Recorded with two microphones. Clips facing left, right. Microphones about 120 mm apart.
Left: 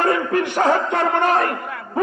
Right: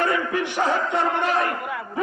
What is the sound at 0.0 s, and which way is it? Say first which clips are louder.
Music: left 4 dB; 55° left (ahead or behind).